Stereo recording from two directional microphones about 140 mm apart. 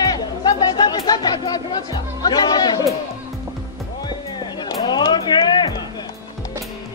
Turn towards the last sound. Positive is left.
turn(degrees=30)  # may be behind; listen again after turning